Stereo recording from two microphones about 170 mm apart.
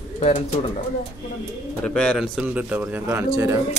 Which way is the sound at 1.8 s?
5° left (ahead or behind).